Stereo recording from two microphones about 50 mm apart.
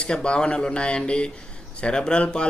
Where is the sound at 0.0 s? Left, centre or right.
Centre.